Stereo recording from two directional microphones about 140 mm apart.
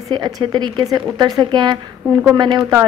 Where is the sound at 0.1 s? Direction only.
30° right (ahead or behind).